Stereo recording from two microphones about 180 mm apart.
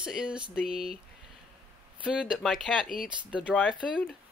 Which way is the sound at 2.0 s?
5° right (ahead or behind).